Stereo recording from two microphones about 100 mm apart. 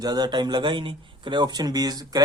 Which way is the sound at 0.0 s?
45° right (ahead or behind).